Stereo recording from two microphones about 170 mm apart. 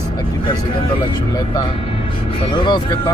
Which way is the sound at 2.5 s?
30° left (ahead or behind).